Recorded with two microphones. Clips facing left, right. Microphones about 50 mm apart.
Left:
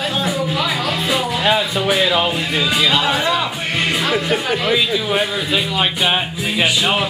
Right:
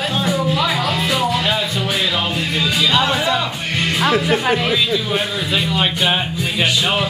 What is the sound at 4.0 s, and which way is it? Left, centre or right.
Speech, centre.